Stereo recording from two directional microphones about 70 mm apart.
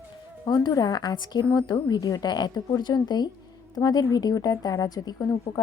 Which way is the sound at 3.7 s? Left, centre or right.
Left.